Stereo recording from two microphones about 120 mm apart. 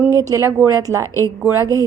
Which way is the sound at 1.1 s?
25° left (ahead or behind).